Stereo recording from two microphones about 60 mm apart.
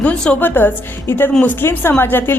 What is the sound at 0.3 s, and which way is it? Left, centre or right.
A woman's voice, left.